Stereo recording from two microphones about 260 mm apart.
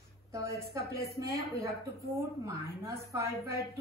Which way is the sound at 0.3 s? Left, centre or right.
Centre.